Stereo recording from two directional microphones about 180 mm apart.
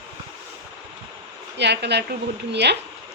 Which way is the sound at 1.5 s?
70° right (ahead or behind).